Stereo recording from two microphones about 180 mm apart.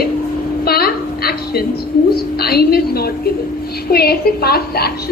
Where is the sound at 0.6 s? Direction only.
60° left (ahead or behind).